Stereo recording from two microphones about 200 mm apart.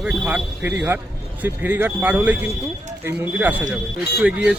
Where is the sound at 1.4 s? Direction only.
10° right (ahead or behind).